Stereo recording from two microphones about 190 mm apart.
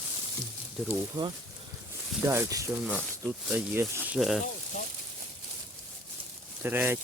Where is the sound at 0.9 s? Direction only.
20° right (ahead or behind).